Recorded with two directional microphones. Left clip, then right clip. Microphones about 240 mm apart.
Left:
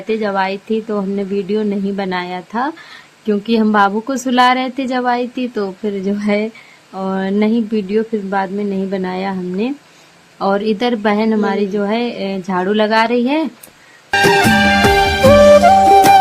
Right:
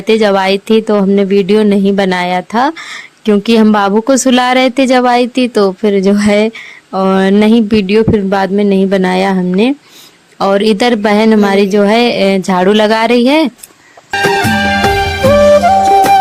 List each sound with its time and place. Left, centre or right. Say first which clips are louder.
0.1 s speech: right 8 dB; right
14.1 s music: even; centre